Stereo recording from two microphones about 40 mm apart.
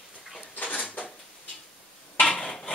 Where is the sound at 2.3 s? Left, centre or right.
Centre.